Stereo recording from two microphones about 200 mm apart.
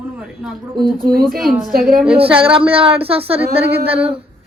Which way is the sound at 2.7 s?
30° right (ahead or behind).